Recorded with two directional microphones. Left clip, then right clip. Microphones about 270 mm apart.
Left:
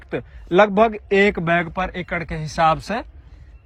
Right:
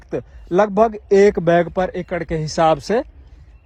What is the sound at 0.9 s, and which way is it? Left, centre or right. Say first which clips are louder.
Speech: right 4 dB; right.